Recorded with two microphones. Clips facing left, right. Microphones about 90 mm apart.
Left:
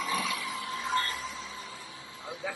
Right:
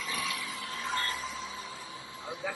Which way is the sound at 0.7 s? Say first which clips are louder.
Left 3 dB; centre (ahead or behind).